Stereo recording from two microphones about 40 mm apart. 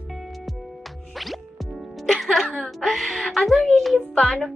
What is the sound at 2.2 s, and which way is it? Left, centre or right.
A woman's voice, centre.